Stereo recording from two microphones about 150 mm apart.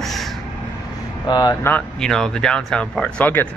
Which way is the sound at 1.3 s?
30° left (ahead or behind).